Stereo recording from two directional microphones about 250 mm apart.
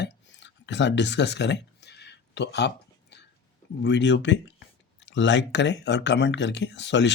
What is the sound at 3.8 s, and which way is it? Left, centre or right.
Speech, left.